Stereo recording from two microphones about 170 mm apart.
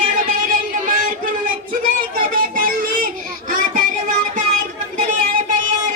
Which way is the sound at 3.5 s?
50° right (ahead or behind).